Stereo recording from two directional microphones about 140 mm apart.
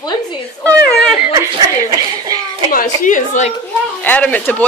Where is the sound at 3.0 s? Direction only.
65° left (ahead or behind).